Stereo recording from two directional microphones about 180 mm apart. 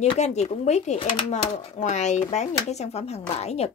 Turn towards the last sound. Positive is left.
turn(degrees=35)  # may be behind; listen again after turning